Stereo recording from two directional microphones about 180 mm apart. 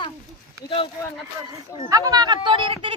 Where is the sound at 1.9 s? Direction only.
20° right (ahead or behind).